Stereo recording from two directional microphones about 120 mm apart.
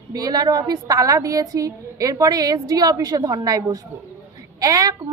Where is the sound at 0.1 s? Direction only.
30° right (ahead or behind).